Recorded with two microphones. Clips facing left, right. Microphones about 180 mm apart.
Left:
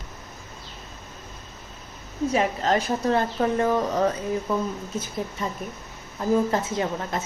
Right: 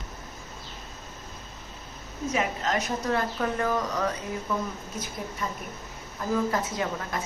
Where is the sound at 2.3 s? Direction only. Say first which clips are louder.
Left 5 dB; 30° left (ahead or behind).